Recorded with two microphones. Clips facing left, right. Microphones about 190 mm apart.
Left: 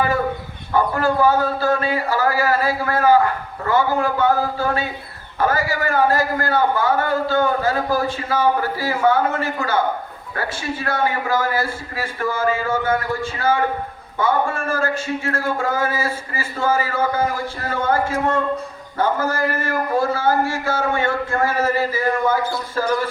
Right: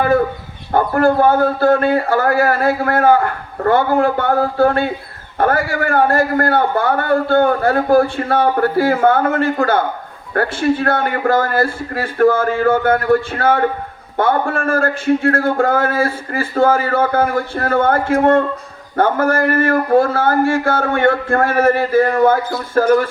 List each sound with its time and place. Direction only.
0.7 s a man's voice: 55° right (ahead or behind)